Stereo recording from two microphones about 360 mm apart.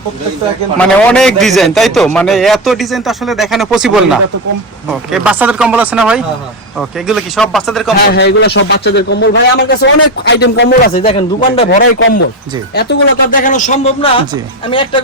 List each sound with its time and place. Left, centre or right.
0.8 s a man's voice: centre
8.1 s speech: left
11.9 s speech: left; by 15.0 s centre